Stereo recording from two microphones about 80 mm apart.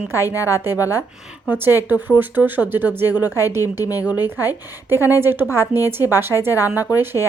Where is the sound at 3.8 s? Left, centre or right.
Left.